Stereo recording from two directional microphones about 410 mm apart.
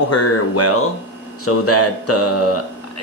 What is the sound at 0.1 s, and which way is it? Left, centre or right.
Speech, left.